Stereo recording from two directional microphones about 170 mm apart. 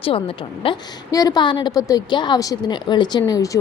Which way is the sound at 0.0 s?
35° left (ahead or behind).